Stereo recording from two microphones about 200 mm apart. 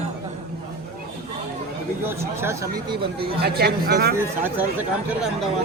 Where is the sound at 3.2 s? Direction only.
55° right (ahead or behind).